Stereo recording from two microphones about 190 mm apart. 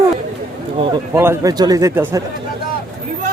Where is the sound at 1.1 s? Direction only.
15° right (ahead or behind).